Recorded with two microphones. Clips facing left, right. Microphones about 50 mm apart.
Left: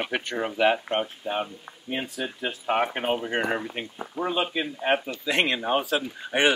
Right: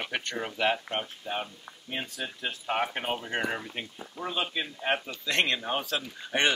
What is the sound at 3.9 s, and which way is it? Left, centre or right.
Speech, left.